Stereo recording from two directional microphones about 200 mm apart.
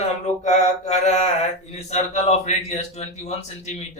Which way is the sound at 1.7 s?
35° left (ahead or behind).